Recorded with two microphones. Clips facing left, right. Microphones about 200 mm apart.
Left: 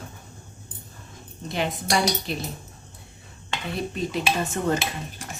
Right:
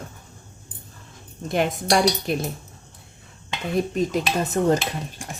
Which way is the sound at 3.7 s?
45° right (ahead or behind).